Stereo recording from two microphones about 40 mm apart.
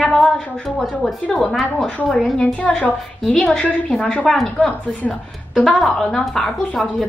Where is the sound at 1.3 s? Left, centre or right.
Centre.